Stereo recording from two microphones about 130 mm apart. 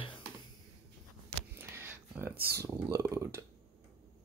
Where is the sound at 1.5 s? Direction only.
15° right (ahead or behind).